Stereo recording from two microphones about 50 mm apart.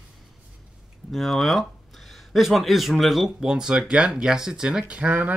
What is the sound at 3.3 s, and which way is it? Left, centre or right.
Speech, centre.